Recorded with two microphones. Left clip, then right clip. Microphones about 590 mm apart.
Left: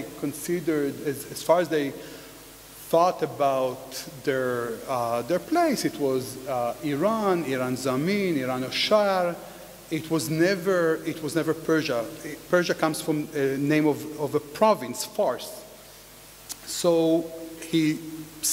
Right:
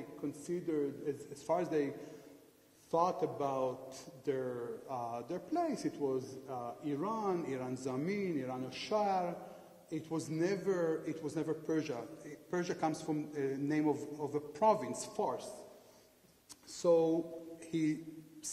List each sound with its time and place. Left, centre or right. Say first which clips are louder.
1.3 s a man's voice: left 13 dB; left
2.9 s a man's voice: left 11 dB; left
16.4 s a sound: left 8 dB; left
17.6 s music: left 12 dB; left
18.4 s static: left 17 dB; left